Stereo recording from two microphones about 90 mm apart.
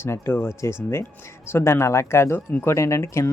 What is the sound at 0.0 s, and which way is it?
Speech, 30° left (ahead or behind).